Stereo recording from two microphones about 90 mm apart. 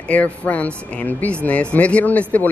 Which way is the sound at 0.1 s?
15° left (ahead or behind).